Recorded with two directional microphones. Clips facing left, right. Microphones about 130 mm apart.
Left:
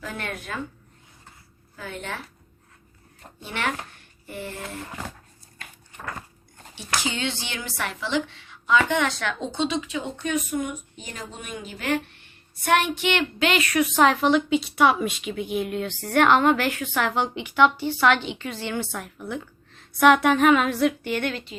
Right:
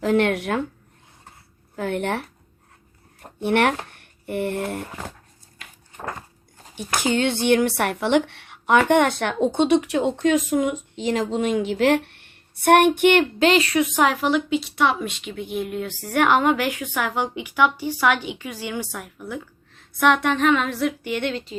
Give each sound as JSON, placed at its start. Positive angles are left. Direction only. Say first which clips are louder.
{"t": 0.0, "sound": "speech", "louder": "right 14 dB", "side_deg": -75}
{"t": 1.7, "sound": "a woman's voice", "louder": "right 10 dB", "side_deg": -65}
{"t": 3.4, "sound": "speech", "louder": "right 10 dB", "side_deg": -65}
{"t": 6.7, "sound": "a woman's voice", "louder": "right 7 dB", "side_deg": -50}
{"t": 13.5, "sound": "a woman's voice", "louder": "right 4 dB", "side_deg": -30}
{"t": 14.0, "sound": "a woman's voice", "louder": "left 3 dB", "side_deg": -5}
{"t": 21.0, "sound": "a woman's voice", "louder": "right 2 dB", "side_deg": -15}